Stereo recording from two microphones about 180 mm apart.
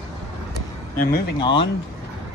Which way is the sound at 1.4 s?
25° left (ahead or behind).